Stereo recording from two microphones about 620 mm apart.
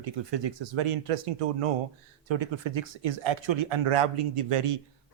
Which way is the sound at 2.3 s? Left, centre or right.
Right.